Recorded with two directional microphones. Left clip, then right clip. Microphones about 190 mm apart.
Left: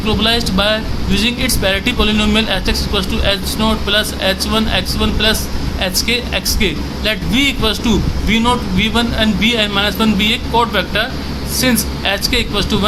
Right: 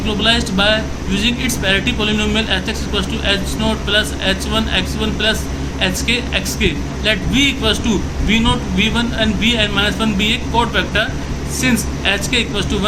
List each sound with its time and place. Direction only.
0.2 s speech: 35° left (ahead or behind)